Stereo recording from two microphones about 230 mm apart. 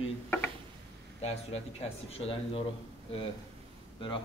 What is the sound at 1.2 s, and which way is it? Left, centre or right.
A man's voice, left.